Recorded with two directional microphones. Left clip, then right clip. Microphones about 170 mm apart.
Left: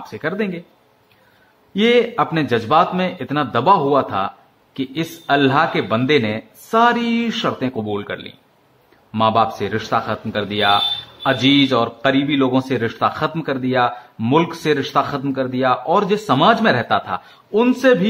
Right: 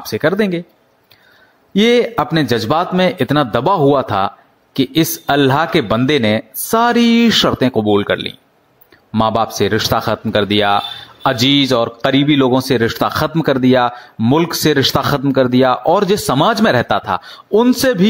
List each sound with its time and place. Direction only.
0.1 s speech: 40° right (ahead or behind)
1.7 s a man's voice: 40° right (ahead or behind)